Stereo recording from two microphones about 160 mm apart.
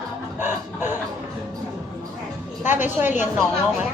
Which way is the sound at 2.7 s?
10° right (ahead or behind).